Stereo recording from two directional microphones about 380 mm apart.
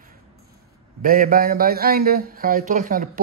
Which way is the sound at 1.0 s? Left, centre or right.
Right.